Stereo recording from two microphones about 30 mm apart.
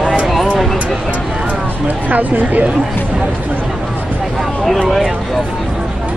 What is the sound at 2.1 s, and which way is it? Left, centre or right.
Speech, right.